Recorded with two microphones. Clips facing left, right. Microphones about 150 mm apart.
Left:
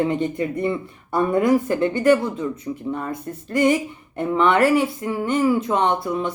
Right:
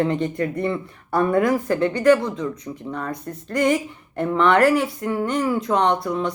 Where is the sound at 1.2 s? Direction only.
20° left (ahead or behind).